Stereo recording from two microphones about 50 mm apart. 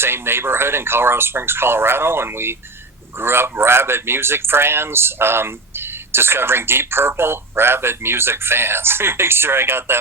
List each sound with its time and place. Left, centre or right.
0.0 s speech: right